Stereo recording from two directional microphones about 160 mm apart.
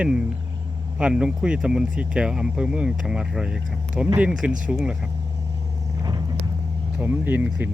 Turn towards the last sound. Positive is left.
turn(degrees=-10)  # may be behind; listen again after turning